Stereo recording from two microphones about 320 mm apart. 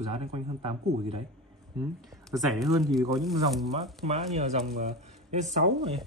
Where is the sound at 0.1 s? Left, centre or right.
Centre.